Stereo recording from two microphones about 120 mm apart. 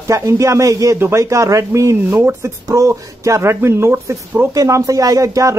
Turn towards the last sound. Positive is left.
turn(degrees=-30)  # may be behind; listen again after turning